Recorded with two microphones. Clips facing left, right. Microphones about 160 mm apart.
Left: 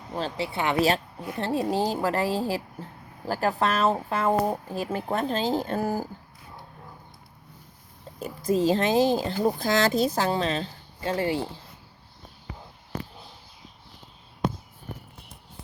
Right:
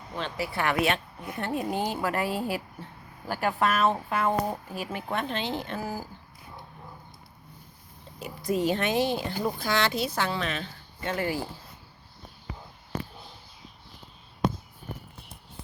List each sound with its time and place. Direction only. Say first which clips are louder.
0.1 s speech: left 3 dB; 35° left (ahead or behind)
0.4 s speech: even; 20° left (ahead or behind)
0.8 s speech: left 3 dB; 35° left (ahead or behind); by 6.1 s 50° left (ahead or behind)
8.7 s speech: left 5 dB; 35° left (ahead or behind)